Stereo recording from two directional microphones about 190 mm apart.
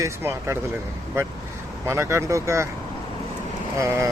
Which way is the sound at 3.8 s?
15° right (ahead or behind).